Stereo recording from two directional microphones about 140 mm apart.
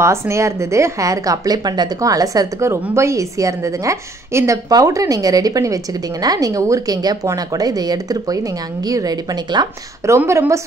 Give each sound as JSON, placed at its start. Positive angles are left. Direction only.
{"t": 0.0, "sound": "a woman's voice", "side_deg": -20}
{"t": 10.1, "sound": "a woman's voice", "side_deg": -20}